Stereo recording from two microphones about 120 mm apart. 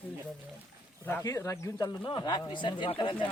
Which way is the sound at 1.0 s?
20° left (ahead or behind).